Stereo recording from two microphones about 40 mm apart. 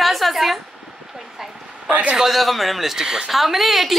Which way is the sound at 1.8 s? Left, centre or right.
Right.